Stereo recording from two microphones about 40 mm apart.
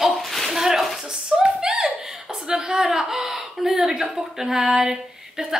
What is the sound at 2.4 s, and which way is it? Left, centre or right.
A woman's voice, centre.